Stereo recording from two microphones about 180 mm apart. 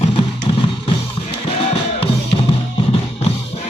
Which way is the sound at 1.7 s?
30° left (ahead or behind).